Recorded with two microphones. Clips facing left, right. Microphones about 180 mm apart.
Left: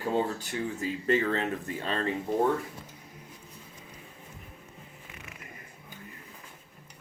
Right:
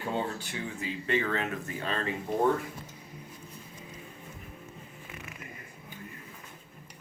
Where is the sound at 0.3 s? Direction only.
40° left (ahead or behind).